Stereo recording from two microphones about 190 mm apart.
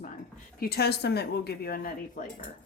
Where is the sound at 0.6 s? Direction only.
55° left (ahead or behind).